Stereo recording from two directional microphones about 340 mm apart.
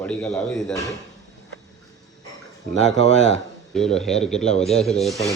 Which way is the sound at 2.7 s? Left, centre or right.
Right.